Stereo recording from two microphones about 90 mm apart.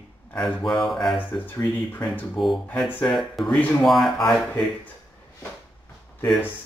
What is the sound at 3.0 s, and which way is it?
Speech, centre (ahead or behind).